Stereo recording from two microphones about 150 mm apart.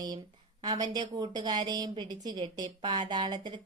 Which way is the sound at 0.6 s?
25° right (ahead or behind).